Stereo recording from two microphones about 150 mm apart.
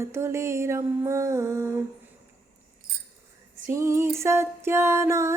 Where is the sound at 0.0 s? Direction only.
20° right (ahead or behind).